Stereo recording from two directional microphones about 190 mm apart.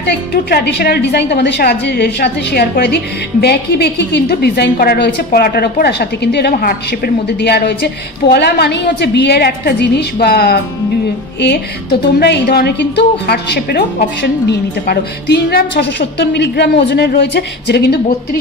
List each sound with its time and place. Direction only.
0.0 s a woman's voice: 55° left (ahead or behind)
12.2 s a woman's voice: 55° left (ahead or behind)
15.8 s a woman's voice: 65° left (ahead or behind)